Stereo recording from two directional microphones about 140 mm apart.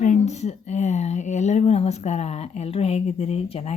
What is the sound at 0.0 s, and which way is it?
Speech, 55° left (ahead or behind).